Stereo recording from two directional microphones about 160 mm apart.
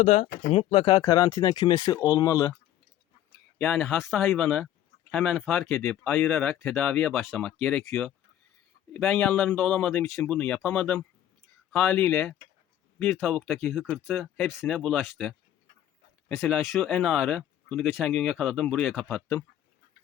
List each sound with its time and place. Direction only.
0.0 s speech: 45° left (ahead or behind); by 2.6 s 20° left (ahead or behind)
3.6 s speech: 5° left (ahead or behind)
16.4 s speech: centre (ahead or behind)